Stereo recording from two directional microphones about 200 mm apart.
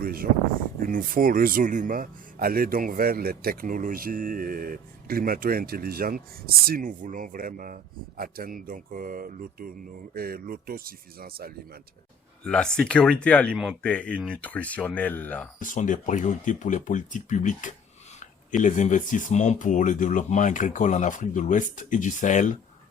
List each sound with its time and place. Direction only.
0.0 s speech: 45° right (ahead or behind)
12.5 s speech: 5° left (ahead or behind)
15.6 s speech: 40° left (ahead or behind)